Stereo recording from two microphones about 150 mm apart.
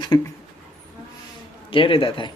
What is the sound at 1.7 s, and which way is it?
Speech, 35° left (ahead or behind).